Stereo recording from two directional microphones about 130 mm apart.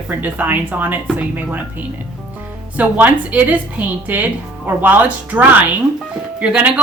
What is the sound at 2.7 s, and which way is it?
Speech, 10° right (ahead or behind).